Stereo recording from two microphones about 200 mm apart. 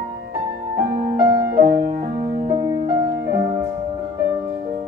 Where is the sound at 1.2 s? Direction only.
15° right (ahead or behind).